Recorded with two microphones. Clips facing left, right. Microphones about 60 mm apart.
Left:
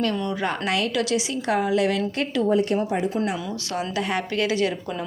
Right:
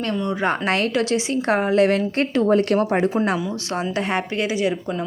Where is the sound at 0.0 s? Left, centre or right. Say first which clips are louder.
Right 2 dB; right.